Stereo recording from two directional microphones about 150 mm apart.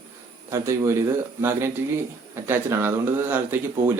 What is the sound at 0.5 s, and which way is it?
Speech, 20° right (ahead or behind).